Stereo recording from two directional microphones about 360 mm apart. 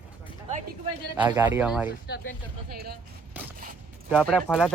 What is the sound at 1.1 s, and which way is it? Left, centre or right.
Speech, centre.